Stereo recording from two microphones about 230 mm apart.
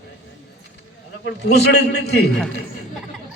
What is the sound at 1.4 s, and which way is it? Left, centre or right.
Speech, left.